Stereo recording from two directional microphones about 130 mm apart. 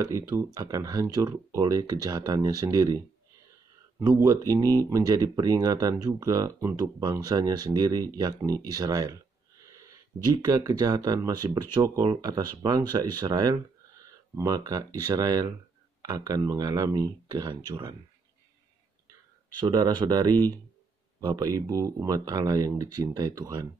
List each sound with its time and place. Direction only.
0.6 s speech: 30° right (ahead or behind)
4.2 s speech: 25° right (ahead or behind)
9.7 s a sound: 25° right (ahead or behind)
10.2 s speech: 30° right (ahead or behind)
19.6 s speech: 35° right (ahead or behind)